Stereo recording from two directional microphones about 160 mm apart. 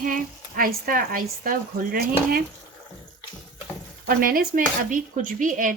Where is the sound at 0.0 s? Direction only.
60° right (ahead or behind).